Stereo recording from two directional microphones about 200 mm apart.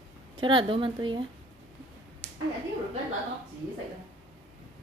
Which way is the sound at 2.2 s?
10° left (ahead or behind).